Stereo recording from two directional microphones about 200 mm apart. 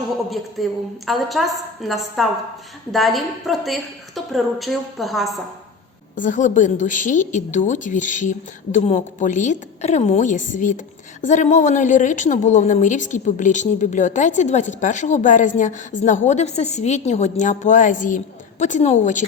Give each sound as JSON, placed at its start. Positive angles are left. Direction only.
{"t": 0.3, "sound": "a woman's voice", "side_deg": 0}
{"t": 6.1, "sound": "speech", "side_deg": 40}